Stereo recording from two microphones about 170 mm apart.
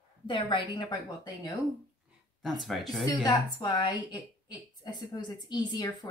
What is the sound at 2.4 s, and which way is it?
Speech, centre (ahead or behind).